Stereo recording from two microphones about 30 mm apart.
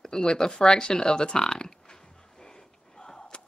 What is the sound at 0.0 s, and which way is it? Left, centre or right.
Speech, centre.